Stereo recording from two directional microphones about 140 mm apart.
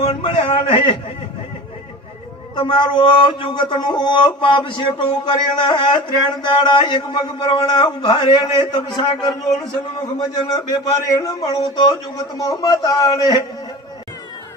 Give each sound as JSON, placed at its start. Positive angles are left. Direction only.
{"t": 0.0, "sound": "a man's voice", "side_deg": 40}
{"t": 2.6, "sound": "a man's voice", "side_deg": 35}